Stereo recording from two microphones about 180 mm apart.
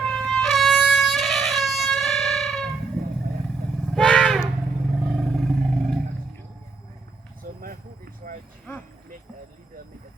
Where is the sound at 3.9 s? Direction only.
Centre (ahead or behind).